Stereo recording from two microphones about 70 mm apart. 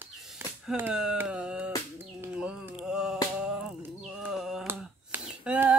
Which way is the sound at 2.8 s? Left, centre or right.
Centre.